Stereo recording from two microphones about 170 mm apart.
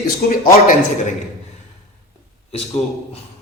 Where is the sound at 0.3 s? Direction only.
55° left (ahead or behind).